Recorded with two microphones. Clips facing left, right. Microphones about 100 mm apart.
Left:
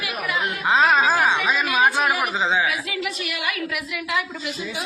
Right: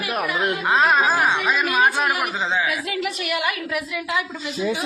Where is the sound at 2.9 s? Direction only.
45° right (ahead or behind).